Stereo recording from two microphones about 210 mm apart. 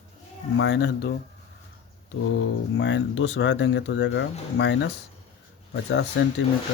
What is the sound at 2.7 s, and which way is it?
Speech, 60° left (ahead or behind).